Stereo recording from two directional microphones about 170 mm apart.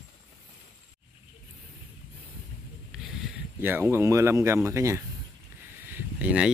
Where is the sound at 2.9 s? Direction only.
5° right (ahead or behind).